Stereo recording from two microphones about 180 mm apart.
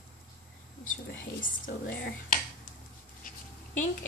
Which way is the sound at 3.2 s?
45° left (ahead or behind).